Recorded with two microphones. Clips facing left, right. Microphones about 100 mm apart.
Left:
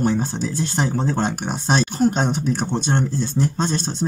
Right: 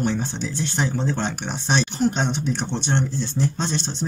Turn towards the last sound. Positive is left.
turn(degrees=25)  # may be behind; listen again after turning